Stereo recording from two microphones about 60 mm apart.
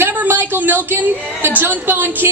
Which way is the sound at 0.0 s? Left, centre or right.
Right.